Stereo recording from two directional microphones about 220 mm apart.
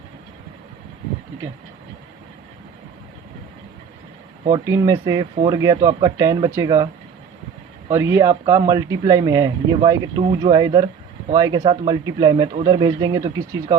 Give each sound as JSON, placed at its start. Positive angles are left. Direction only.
{"t": 4.4, "sound": "speech", "side_deg": -15}
{"t": 7.9, "sound": "speech", "side_deg": -15}